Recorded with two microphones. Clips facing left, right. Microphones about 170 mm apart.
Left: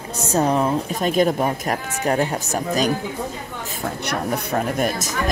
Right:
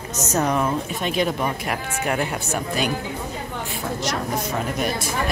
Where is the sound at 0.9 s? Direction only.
40° left (ahead or behind).